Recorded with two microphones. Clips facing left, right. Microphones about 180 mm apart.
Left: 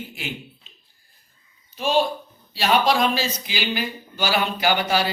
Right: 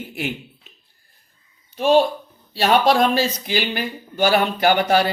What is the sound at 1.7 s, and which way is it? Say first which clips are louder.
Speech: right 5 dB; 55° right (ahead or behind).